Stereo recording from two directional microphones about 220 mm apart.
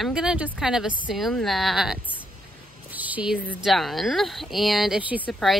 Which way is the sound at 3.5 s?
Centre (ahead or behind).